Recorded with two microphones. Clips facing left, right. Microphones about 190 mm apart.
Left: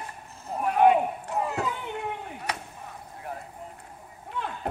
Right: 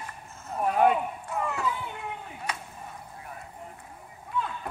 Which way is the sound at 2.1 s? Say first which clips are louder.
Left 3 dB; 65° left (ahead or behind).